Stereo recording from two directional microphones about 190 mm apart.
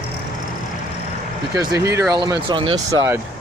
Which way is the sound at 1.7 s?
15° right (ahead or behind).